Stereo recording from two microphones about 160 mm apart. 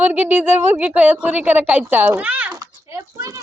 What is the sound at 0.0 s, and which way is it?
A woman's voice, 10° right (ahead or behind).